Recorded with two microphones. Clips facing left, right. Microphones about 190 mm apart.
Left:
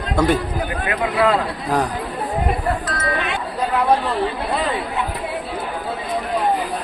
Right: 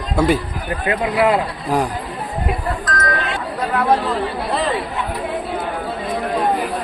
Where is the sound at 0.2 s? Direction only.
10° right (ahead or behind).